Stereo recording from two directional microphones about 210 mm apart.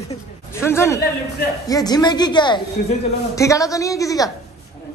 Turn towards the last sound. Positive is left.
turn(degrees=15)  # may be behind; listen again after turning